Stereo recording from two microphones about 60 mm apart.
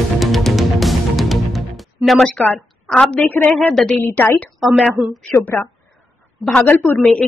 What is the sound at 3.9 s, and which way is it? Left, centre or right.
Speech, left.